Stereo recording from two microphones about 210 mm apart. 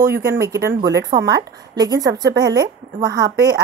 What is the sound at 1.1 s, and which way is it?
Speech, 25° right (ahead or behind).